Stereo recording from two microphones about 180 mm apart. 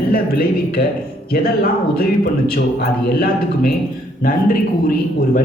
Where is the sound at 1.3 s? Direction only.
60° left (ahead or behind).